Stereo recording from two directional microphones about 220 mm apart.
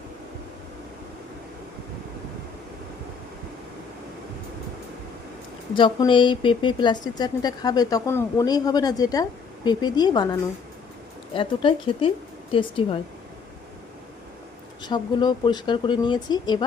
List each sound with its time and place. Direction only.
5.7 s speech: 20° left (ahead or behind)
11.3 s speech: 25° left (ahead or behind)
14.8 s speech: 20° left (ahead or behind)